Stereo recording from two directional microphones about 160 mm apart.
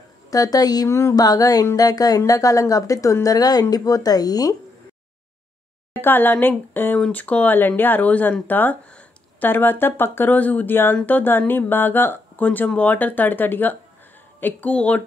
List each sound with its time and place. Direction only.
0.3 s speech: 20° left (ahead or behind)
5.9 s speech: 10° left (ahead or behind)